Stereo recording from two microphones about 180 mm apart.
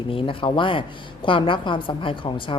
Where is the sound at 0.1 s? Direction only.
30° left (ahead or behind).